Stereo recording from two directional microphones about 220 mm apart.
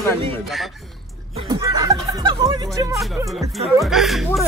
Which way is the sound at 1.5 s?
15° right (ahead or behind).